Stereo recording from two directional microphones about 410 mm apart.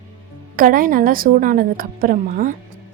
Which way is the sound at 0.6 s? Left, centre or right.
Centre.